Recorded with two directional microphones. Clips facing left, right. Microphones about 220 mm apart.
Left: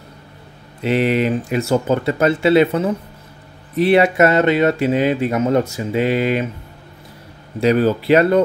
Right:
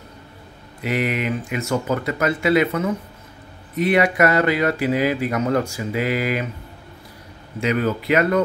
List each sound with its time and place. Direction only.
0.7 s speech: 30° left (ahead or behind)
7.6 s speech: 35° left (ahead or behind)